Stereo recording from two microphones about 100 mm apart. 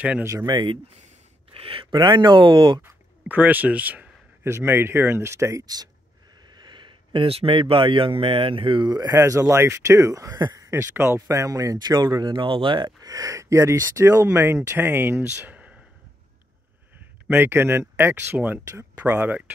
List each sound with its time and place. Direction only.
0.2 s speech: 25° right (ahead or behind)
0.5 s speech: 45° right (ahead or behind)
1.5 s a sound: 70° right (ahead or behind)
2.0 s speech: 45° right (ahead or behind)
2.8 s speech: 15° right (ahead or behind)
6.4 s speech: 50° right (ahead or behind)
8.8 s speech: 40° right (ahead or behind)
10.7 s speech: 25° right (ahead or behind)
17.3 s speech: 25° right (ahead or behind)